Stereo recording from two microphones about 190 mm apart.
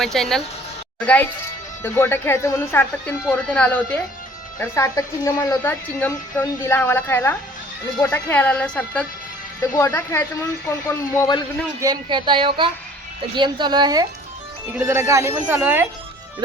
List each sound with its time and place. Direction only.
0.0 s a woman's voice: centre (ahead or behind); by 11.4 s 20° left (ahead or behind)
11.8 s speech: 20° right (ahead or behind)